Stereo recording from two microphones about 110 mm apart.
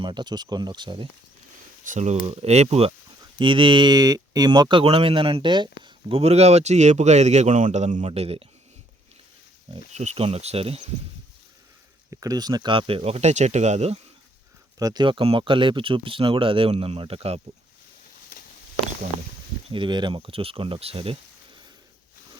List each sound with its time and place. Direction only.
0.0 s speech: 45° right (ahead or behind)
2.0 s speech: 75° right (ahead or behind)
3.3 s speech: 50° right (ahead or behind); by 8.4 s 65° right (ahead or behind)
9.7 s speech: 90° right; by 10.8 s 65° right (ahead or behind)
12.1 s speech: 35° right (ahead or behind)
12.7 s speech: 60° right (ahead or behind); by 14.0 s 80° right
14.8 s speech: 40° right (ahead or behind); by 17.4 s 70° right (ahead or behind)
19.7 s speech: 45° right (ahead or behind)